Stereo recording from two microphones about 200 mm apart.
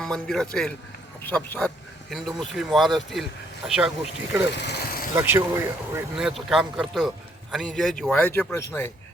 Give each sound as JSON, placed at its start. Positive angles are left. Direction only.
{"t": 0.0, "sound": "speech", "side_deg": 0}
{"t": 4.5, "sound": "vehicle", "side_deg": 55}
{"t": 5.1, "sound": "speech", "side_deg": -10}